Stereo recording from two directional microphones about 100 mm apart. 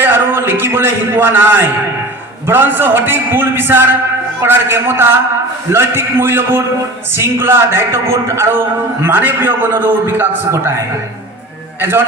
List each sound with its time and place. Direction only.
0.0 s a man's voice: 20° right (ahead or behind)
11.8 s a man's voice: 20° right (ahead or behind)